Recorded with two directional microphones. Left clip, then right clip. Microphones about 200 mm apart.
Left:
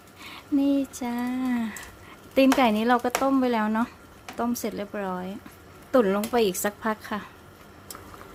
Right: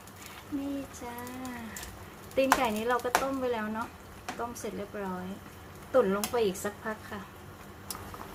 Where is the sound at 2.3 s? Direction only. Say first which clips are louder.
Left 6 dB; 50° left (ahead or behind).